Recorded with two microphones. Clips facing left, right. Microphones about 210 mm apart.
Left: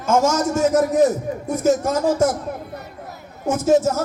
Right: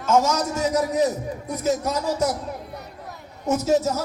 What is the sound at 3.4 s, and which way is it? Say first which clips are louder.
Speech: left 4 dB; 50° left (ahead or behind).